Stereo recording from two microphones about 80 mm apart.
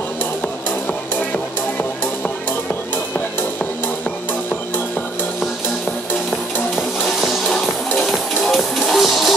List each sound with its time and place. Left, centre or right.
1.3 s music: centre
8.1 s music: centre